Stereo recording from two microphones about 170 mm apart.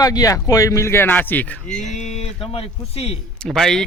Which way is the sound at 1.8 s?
45° left (ahead or behind).